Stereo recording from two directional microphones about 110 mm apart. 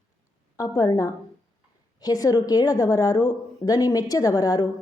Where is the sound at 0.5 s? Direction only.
35° left (ahead or behind).